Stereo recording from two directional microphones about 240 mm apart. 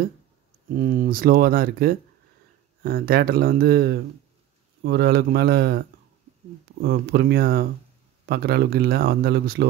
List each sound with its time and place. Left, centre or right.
0.7 s speech: right